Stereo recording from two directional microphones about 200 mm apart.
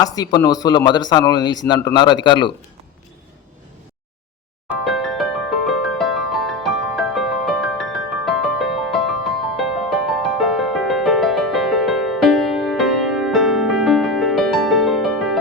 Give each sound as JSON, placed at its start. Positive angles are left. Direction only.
{"t": 0.0, "sound": "speech", "side_deg": 20}
{"t": 4.7, "sound": "music", "side_deg": 0}